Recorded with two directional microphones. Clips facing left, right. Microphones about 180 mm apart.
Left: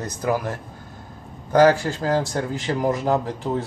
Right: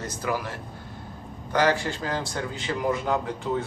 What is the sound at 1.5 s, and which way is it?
A man's voice, 45° left (ahead or behind).